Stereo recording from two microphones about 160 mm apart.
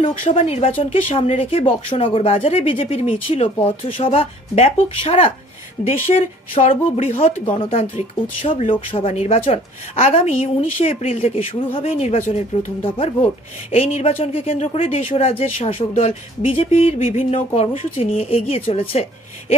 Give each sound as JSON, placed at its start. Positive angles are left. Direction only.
{"t": 0.0, "sound": "speech", "side_deg": 35}